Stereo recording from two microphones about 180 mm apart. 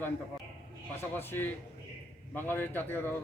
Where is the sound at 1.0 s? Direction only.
10° left (ahead or behind).